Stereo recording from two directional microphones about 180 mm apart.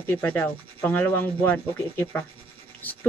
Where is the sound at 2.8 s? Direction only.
10° left (ahead or behind).